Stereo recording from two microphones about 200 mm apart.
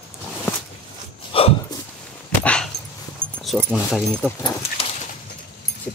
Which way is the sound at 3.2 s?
10° right (ahead or behind).